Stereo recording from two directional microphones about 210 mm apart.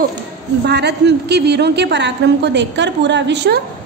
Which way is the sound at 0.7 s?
55° right (ahead or behind).